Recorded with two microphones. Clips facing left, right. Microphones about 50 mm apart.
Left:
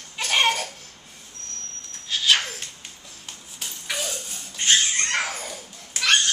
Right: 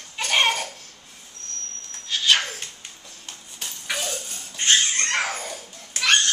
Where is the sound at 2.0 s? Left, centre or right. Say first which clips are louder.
Even; centre.